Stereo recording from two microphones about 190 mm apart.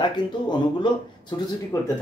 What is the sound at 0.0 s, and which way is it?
Speech, 25° left (ahead or behind).